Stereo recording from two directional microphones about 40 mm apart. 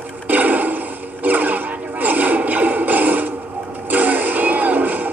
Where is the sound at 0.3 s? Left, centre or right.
Right.